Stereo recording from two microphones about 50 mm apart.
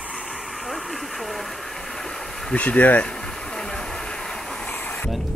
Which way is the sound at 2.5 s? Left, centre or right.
Left.